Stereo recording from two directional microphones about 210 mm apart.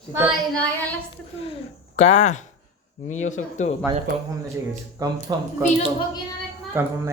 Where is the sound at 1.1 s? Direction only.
25° left (ahead or behind).